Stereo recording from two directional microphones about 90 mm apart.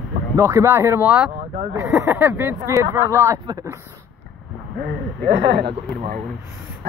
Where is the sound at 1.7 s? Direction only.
35° right (ahead or behind).